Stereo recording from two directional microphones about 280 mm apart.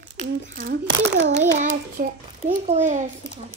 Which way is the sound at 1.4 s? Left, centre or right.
Right.